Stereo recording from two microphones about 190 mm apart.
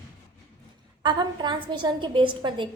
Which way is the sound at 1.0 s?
25° right (ahead or behind).